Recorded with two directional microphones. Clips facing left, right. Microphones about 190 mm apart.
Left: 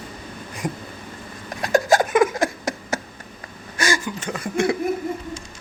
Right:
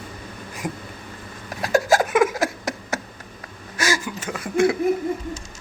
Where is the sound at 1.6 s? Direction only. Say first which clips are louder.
Left 1 dB; 5° right (ahead or behind).